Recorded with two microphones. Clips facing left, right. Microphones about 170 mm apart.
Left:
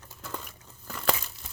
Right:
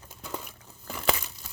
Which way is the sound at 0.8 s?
10° right (ahead or behind).